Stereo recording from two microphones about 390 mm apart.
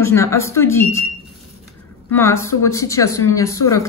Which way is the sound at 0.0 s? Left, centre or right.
Centre.